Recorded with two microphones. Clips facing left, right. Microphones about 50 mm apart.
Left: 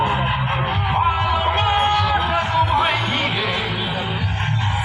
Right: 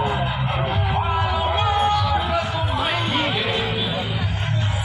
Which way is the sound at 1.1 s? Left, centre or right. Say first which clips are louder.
Left 2 dB; left.